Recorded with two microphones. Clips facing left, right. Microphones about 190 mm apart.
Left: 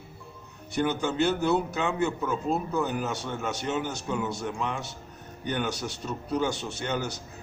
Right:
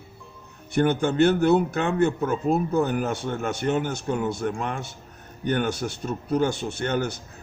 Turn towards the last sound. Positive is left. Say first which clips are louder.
# right 5 dB
turn(degrees=-55)  # may be behind; listen again after turning